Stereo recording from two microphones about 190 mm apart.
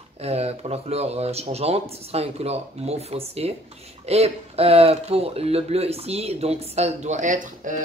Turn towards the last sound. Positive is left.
turn(degrees=-40)  # may be behind; listen again after turning